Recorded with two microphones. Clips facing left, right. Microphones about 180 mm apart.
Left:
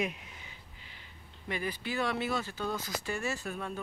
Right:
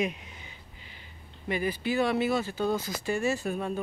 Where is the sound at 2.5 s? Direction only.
30° right (ahead or behind).